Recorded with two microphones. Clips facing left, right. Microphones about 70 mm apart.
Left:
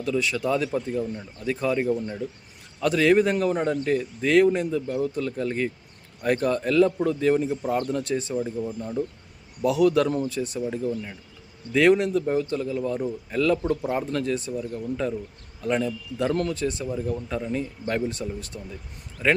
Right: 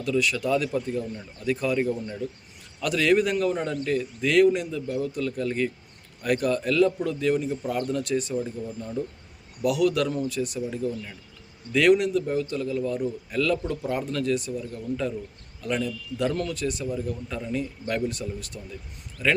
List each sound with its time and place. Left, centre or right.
0.0 s a man's voice: left
15.6 s a man's voice: left